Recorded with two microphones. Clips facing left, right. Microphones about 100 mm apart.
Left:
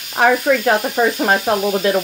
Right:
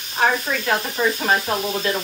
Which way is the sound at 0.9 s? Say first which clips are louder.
Left 5 dB; 60° left (ahead or behind).